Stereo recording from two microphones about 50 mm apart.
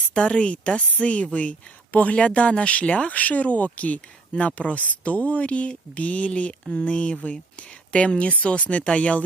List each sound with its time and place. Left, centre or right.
0.1 s a woman's voice: centre